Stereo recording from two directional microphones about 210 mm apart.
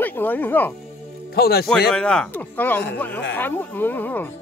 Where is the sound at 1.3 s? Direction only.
50° left (ahead or behind).